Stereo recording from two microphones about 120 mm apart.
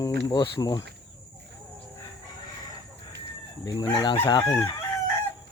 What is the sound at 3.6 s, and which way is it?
Speech, 30° left (ahead or behind).